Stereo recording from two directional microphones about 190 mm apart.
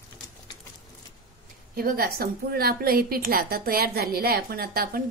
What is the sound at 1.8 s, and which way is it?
A woman's voice, 50° right (ahead or behind).